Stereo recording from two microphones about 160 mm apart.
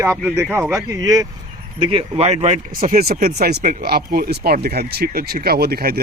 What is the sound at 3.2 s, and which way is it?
Speech, 80° right.